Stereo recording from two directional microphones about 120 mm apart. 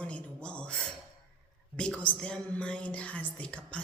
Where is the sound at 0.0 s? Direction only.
10° left (ahead or behind).